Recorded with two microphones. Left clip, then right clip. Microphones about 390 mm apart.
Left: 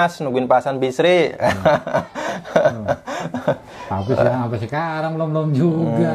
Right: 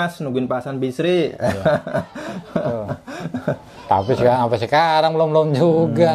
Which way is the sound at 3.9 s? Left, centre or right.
Right.